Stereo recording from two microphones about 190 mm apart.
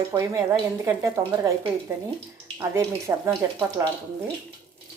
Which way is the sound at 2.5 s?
15° right (ahead or behind).